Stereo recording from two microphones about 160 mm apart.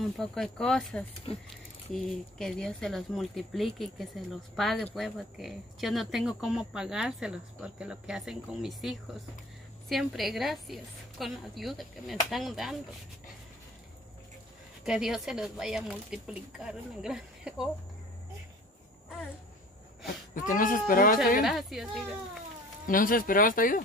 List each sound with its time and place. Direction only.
0.2 s speech: 5° left (ahead or behind)
1.3 s speech: 35° left (ahead or behind)
2.0 s speech: 5° left (ahead or behind)
14.9 s speech: centre (ahead or behind)
20.1 s speech: 55° left (ahead or behind)
21.4 s speech: centre (ahead or behind)
22.8 s speech: 60° left (ahead or behind)